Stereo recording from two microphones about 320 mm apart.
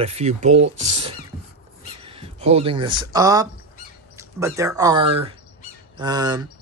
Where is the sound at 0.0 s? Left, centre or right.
Centre.